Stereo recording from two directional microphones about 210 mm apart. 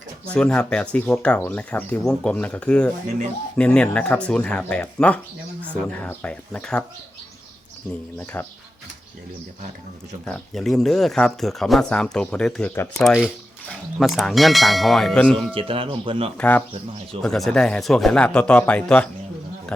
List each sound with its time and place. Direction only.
0.3 s speech: 5° left (ahead or behind)
8.4 s speech: 10° left (ahead or behind)
10.2 s speech: 5° left (ahead or behind)
13.1 s speech: 5° right (ahead or behind)
15.5 s speech: 25° right (ahead or behind)
16.4 s speech: 5° left (ahead or behind)